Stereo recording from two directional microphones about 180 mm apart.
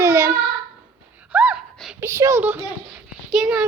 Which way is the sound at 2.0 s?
15° right (ahead or behind).